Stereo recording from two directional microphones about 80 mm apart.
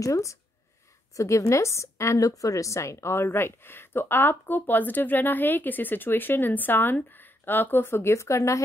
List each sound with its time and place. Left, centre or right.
0.0 s a woman's voice: left